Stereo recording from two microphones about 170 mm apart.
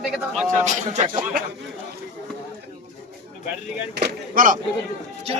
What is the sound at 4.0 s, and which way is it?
Speech, 55° right (ahead or behind).